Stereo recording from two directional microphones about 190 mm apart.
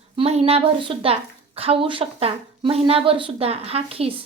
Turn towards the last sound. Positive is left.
turn(degrees=-30)  # may be behind; listen again after turning